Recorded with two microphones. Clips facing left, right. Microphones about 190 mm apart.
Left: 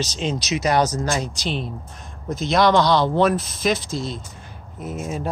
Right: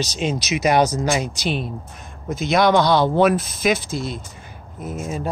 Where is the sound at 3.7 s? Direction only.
55° right (ahead or behind).